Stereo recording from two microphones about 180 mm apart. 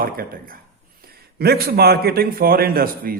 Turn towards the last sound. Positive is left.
turn(degrees=-55)  # may be behind; listen again after turning